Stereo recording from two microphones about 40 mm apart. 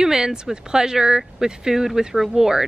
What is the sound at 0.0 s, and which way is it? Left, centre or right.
Speech, centre.